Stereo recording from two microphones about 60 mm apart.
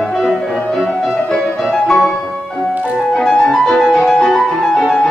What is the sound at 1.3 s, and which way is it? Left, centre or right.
Music, centre.